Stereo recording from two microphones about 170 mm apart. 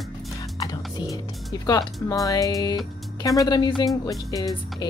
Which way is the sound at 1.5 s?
20° left (ahead or behind).